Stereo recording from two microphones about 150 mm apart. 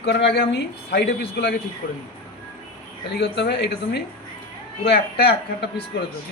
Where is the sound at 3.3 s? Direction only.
90° left.